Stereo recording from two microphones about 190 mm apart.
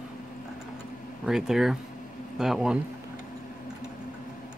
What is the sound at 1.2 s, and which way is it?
Speech, centre (ahead or behind).